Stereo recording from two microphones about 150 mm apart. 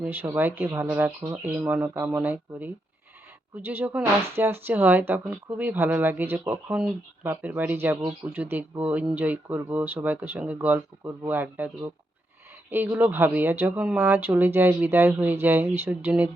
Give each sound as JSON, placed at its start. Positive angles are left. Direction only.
{"t": 0.0, "sound": "speech", "side_deg": -10}